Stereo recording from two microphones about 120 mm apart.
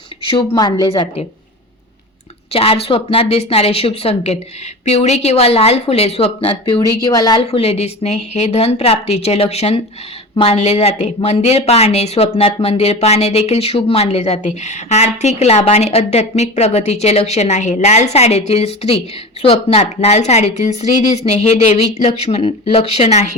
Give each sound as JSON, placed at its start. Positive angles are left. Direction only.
{"t": 0.3, "sound": "a woman's voice", "side_deg": 40}
{"t": 0.9, "sound": "a woman's voice", "side_deg": 50}
{"t": 2.5, "sound": "a woman's voice", "side_deg": 55}
{"t": 7.0, "sound": "a woman's voice", "side_deg": 30}
{"t": 7.4, "sound": "speech", "side_deg": 55}